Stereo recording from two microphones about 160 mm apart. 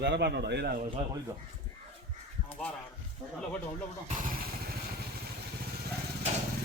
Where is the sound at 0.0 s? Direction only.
90° right.